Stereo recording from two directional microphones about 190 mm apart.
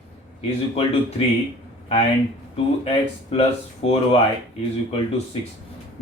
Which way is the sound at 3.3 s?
30° left (ahead or behind).